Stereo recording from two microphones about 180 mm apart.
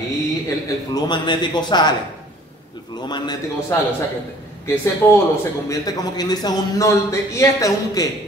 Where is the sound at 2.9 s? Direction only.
25° left (ahead or behind).